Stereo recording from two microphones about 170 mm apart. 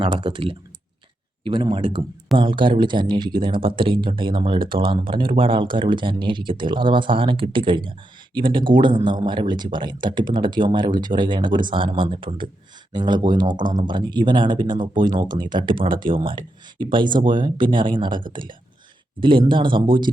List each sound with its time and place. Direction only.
0.0 s speech: 30° right (ahead or behind)
19.2 s speech: 30° right (ahead or behind)